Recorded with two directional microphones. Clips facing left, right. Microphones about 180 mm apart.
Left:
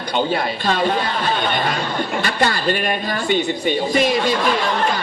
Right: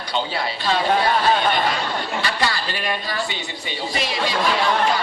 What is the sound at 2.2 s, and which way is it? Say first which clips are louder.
A woman's voice: left 5 dB; 50° left (ahead or behind).